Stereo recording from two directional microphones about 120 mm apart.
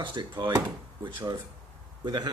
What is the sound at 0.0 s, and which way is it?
Speech, 40° right (ahead or behind).